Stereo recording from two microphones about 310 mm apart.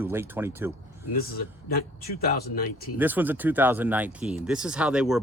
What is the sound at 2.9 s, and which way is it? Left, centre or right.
Speech, centre.